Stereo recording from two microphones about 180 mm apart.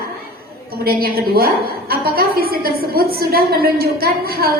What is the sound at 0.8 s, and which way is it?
A woman's voice, 55° right (ahead or behind).